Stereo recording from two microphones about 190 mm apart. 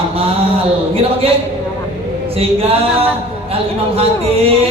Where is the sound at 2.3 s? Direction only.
30° right (ahead or behind).